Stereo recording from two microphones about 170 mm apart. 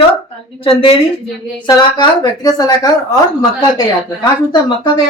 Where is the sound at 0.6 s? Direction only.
30° left (ahead or behind).